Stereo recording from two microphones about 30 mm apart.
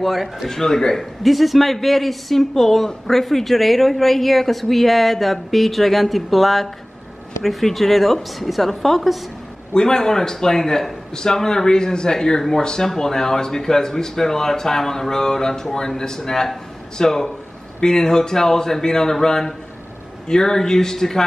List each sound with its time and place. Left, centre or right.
0.0 s speech: centre
0.5 s speech: centre
1.2 s speech: centre
9.8 s speech: left